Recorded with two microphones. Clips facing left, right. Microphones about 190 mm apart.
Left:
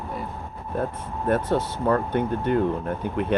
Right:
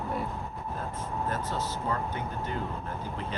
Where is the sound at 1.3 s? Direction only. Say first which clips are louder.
Left 10 dB; 60° left (ahead or behind).